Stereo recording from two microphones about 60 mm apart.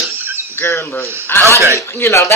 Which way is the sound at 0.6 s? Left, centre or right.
Left.